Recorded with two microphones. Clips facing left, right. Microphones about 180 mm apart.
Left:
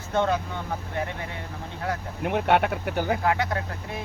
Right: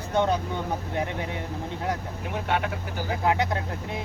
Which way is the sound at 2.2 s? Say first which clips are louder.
Left 9 dB; 65° left (ahead or behind).